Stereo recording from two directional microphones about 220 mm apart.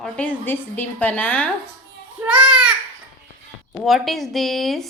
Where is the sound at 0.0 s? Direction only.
5° left (ahead or behind).